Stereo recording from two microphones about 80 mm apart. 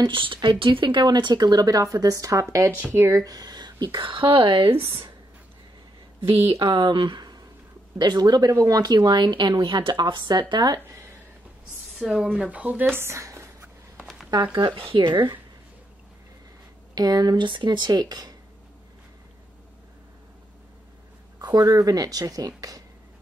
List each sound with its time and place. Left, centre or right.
0.0 s speech: right
6.6 s speech: right
10.5 s speech: right
12.0 s speech: centre
12.4 s speech: centre; by 13.7 s right
14.3 s speech: right
14.8 s speech: right
16.9 s speech: right
17.5 s speech: right
21.4 s speech: right
22.6 s a sound: right